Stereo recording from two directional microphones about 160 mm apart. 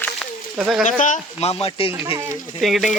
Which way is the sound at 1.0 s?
45° left (ahead or behind).